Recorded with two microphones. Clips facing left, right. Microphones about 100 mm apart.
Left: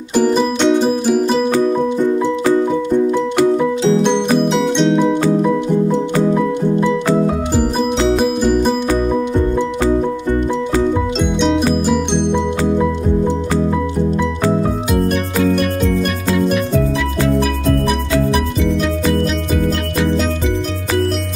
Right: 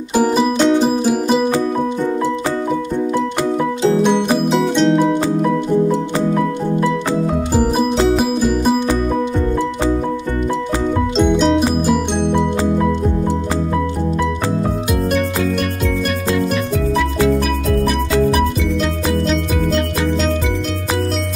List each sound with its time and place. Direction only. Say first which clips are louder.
0.1 s music: left 1 dB; 10° right (ahead or behind)
4.5 s music: even; centre (ahead or behind)
8.2 s music: left 2 dB; centre (ahead or behind)
11.1 s music: right 6 dB; centre (ahead or behind)